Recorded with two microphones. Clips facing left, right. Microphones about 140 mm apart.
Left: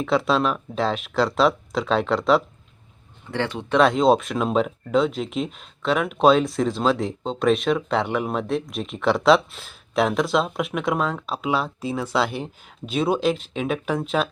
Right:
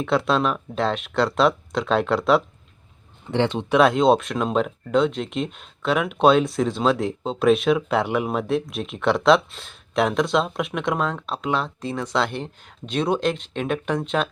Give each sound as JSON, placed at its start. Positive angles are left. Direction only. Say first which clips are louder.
{"t": 0.0, "sound": "speech", "louder": "even", "side_deg": 0}
{"t": 3.3, "sound": "speech", "louder": "right 4 dB", "side_deg": -20}
{"t": 3.7, "sound": "speech", "louder": "even", "side_deg": 0}